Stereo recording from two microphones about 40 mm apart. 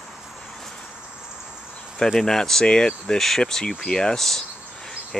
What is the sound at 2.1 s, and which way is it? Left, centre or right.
Speech, centre.